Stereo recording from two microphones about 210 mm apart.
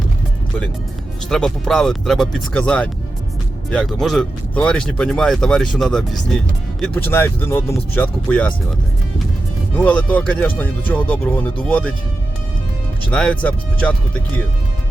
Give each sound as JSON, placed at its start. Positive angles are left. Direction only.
{"t": 1.3, "sound": "speech", "side_deg": 0}
{"t": 9.7, "sound": "speech", "side_deg": 5}
{"t": 13.1, "sound": "speech", "side_deg": 5}